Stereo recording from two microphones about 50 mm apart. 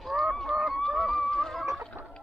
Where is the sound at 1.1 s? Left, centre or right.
Centre.